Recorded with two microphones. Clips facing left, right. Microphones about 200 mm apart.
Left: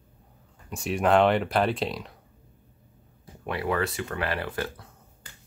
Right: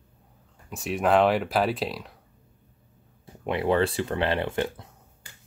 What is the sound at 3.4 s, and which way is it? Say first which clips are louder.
Speech: right 4 dB; 25° right (ahead or behind).